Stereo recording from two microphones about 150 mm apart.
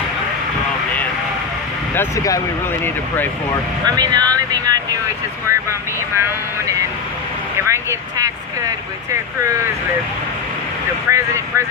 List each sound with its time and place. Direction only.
2.0 s speech: 20° left (ahead or behind)
3.8 s speech: 25° right (ahead or behind)
6.1 s speech: 20° right (ahead or behind)
11.1 s speech: 20° right (ahead or behind)